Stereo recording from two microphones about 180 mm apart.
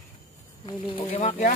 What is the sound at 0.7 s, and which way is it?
Speech, 30° left (ahead or behind).